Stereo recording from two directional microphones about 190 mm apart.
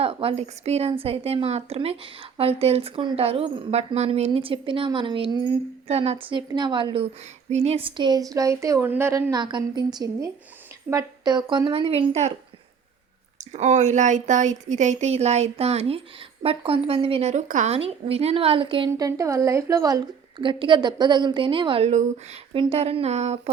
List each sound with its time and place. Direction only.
0.0 s a woman's voice: 30° right (ahead or behind)
13.4 s a woman's voice: 40° right (ahead or behind)